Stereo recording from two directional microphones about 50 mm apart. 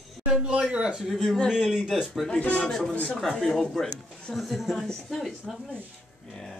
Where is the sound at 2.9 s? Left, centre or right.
Left.